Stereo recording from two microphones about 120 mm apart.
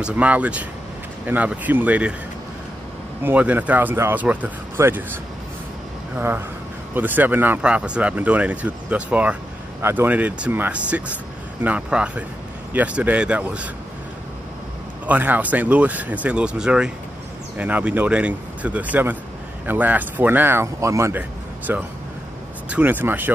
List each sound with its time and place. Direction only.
0.0 s speech: 10° right (ahead or behind)
3.3 s speech: 15° right (ahead or behind)
15.0 s speech: 15° right (ahead or behind)